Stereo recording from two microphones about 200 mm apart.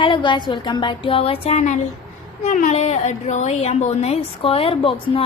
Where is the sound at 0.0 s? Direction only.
25° left (ahead or behind).